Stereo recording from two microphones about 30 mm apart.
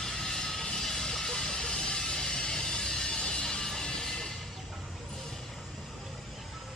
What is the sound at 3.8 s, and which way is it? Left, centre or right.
Music, left.